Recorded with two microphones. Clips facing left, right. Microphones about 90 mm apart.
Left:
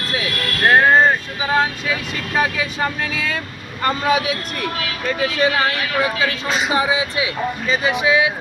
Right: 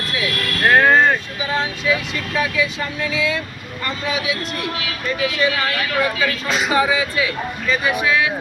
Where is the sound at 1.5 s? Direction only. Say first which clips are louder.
Left 1 dB; 45° left (ahead or behind).